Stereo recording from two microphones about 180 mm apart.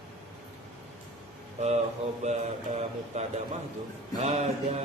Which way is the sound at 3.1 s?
35° right (ahead or behind).